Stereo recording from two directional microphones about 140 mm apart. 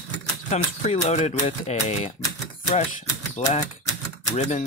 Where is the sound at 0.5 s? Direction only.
50° left (ahead or behind).